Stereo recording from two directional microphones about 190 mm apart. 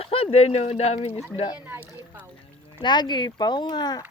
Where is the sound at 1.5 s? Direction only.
10° right (ahead or behind).